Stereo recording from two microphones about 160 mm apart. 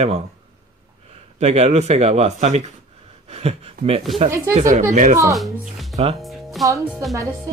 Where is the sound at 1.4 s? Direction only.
40° right (ahead or behind).